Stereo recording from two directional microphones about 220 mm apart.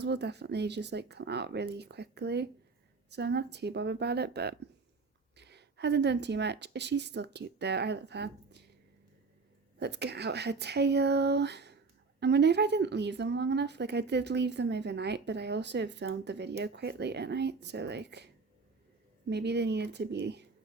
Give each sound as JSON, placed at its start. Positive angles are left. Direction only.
{"t": 0.0, "sound": "speech", "side_deg": -50}
{"t": 9.7, "sound": "speech", "side_deg": -50}
{"t": 19.3, "sound": "speech", "side_deg": -50}